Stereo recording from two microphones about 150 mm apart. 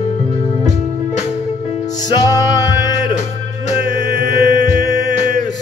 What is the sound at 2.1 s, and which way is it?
Music, 25° left (ahead or behind).